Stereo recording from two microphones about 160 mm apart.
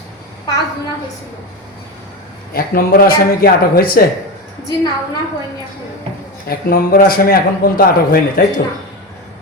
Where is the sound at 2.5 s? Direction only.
65° left (ahead or behind).